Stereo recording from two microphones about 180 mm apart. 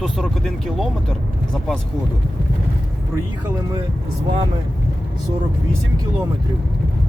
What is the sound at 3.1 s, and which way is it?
Speech, 15° right (ahead or behind).